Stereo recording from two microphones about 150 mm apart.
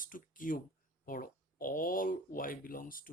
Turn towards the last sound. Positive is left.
turn(degrees=70)  # may be behind; listen again after turning